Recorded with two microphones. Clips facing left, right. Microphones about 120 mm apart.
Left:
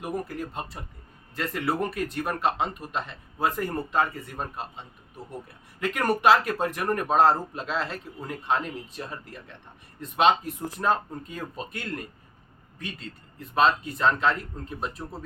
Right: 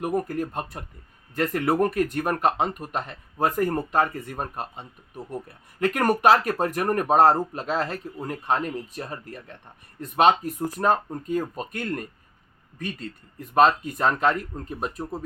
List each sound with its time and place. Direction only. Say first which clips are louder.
0.0 s speech: right 6 dB; 50° right (ahead or behind)
13.5 s speech: right 4 dB; 45° right (ahead or behind)